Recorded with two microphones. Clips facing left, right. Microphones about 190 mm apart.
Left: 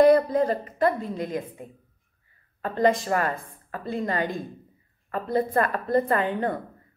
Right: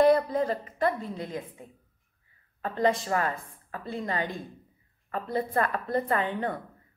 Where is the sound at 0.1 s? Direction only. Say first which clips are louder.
Left 4 dB; 45° left (ahead or behind).